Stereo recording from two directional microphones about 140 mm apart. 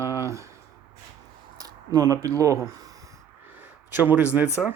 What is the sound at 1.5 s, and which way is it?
Speech, 25° right (ahead or behind).